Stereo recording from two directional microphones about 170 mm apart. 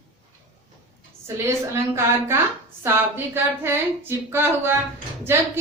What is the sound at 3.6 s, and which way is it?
A woman's voice, 15° right (ahead or behind).